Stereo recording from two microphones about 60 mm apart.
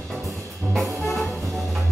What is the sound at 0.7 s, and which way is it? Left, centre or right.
Brass instrument, centre.